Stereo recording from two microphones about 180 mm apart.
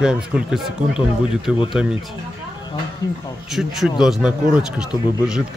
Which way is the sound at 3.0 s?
20° left (ahead or behind).